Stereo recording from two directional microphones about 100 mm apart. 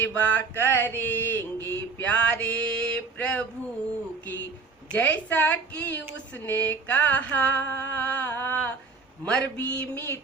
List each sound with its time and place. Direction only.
0.0 s mantra: 15° left (ahead or behind)
4.9 s a woman's voice: 15° left (ahead or behind)